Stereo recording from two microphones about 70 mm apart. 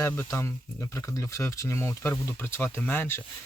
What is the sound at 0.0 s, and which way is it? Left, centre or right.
Speech, left.